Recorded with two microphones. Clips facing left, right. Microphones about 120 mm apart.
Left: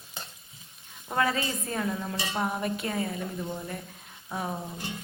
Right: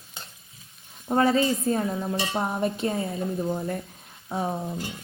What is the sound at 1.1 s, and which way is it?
Speech, 30° right (ahead or behind).